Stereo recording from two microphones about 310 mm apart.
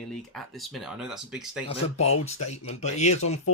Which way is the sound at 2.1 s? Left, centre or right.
Left.